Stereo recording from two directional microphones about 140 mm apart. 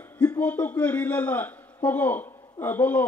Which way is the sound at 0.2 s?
10° left (ahead or behind).